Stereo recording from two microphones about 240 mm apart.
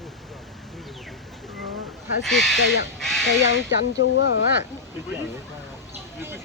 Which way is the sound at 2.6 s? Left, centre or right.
Left.